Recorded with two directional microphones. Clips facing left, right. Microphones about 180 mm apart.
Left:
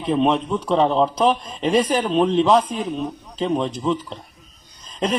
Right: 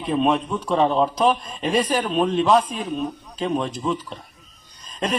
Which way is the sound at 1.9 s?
20° left (ahead or behind).